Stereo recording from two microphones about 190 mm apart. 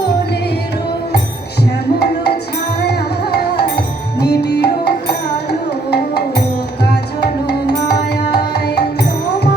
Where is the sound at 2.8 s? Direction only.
60° left (ahead or behind).